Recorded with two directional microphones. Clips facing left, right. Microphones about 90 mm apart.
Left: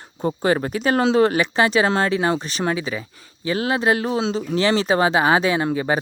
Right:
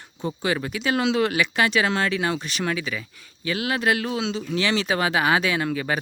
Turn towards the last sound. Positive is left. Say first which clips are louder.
# left 4 dB
turn(degrees=25)  # may be behind; listen again after turning